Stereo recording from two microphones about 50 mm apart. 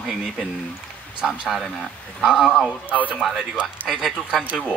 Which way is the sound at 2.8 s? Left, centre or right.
Right.